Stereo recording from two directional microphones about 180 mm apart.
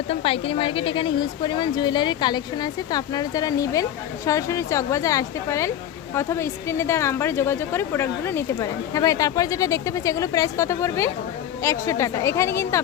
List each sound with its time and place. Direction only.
0.1 s speech: 30° left (ahead or behind); by 12.8 s 15° left (ahead or behind)